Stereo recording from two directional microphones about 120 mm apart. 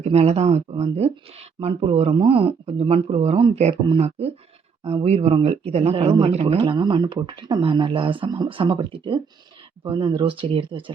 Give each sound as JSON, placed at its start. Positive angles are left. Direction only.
{"t": 0.0, "sound": "speech", "side_deg": -65}